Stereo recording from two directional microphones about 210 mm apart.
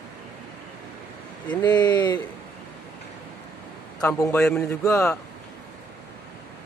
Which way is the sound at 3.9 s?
5° left (ahead or behind).